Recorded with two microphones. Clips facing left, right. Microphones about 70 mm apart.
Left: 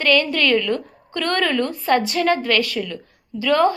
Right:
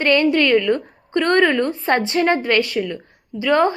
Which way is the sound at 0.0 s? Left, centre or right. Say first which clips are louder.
Right 3 dB; right.